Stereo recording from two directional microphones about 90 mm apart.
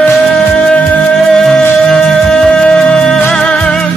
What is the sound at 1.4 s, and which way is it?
Music, 5° left (ahead or behind).